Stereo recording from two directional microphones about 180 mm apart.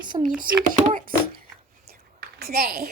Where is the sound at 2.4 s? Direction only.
60° right (ahead or behind).